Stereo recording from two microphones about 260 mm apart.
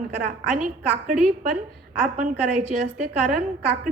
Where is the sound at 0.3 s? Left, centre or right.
Right.